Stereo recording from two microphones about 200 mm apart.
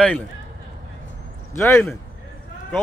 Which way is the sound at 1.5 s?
10° left (ahead or behind).